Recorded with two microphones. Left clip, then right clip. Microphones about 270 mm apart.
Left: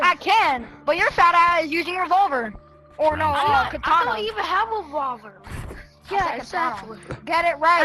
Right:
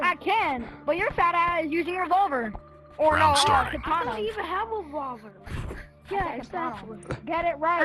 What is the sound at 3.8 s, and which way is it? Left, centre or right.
Speech, left.